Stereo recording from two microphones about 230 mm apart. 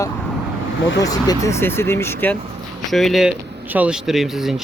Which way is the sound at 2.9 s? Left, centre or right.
Centre.